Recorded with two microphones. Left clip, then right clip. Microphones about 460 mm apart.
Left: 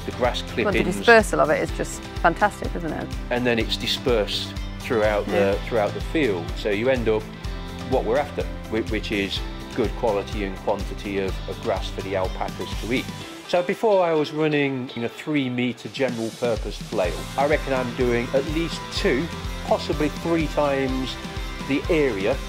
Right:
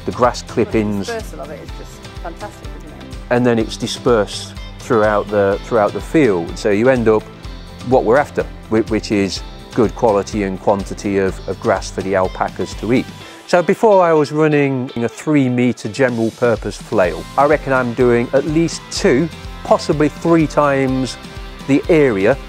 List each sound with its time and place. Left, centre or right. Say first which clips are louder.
0.2 s speech: right 7 dB; right
1.0 s speech: left 11 dB; left
3.3 s speech: right 8 dB; right
13.5 s speech: right 8 dB; right
21.6 s speech: right 9 dB; right